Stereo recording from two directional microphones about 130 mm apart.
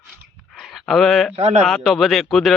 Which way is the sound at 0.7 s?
Centre (ahead or behind).